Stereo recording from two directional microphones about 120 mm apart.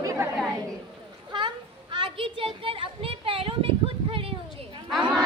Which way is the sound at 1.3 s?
40° right (ahead or behind).